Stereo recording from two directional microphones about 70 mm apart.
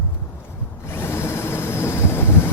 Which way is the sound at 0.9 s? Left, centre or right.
Left.